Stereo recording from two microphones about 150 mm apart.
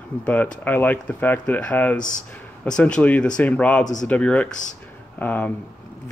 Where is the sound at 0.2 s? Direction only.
10° left (ahead or behind).